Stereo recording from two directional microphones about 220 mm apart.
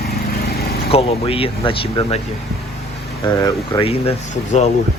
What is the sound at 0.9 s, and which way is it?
Speech, 25° left (ahead or behind).